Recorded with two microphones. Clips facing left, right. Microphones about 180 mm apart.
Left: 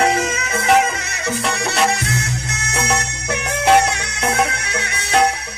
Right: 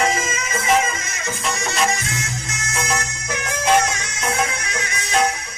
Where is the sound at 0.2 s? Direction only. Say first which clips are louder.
Left 4 dB; 65° left (ahead or behind).